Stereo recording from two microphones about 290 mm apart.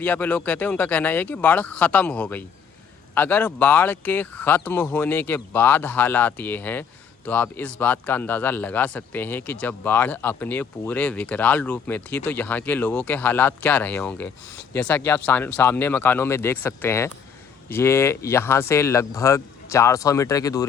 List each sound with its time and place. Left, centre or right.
0.0 s speech: centre